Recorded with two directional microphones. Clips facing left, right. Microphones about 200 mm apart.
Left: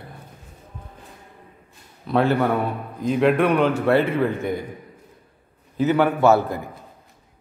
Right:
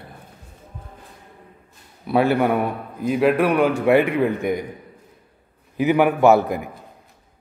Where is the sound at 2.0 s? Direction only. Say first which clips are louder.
Right 2 dB; 10° right (ahead or behind).